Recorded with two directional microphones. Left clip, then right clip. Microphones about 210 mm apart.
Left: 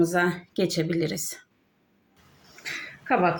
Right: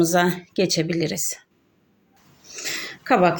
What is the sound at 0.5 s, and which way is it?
Speech, 20° right (ahead or behind).